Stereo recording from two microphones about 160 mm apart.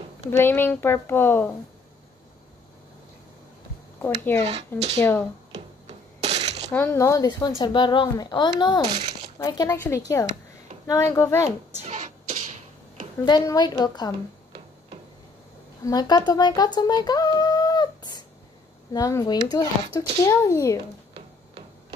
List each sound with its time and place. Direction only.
0.3 s a woman's voice: 15° left (ahead or behind)
4.0 s a woman's voice: 10° left (ahead or behind)
4.4 s speech: 40° right (ahead or behind)
6.2 s a sound: 45° right (ahead or behind)
6.7 s a woman's voice: 15° left (ahead or behind)
11.8 s beatboxing: 50° right (ahead or behind)
13.2 s speech: 25° left (ahead or behind)
15.8 s speech: 25° left (ahead or behind)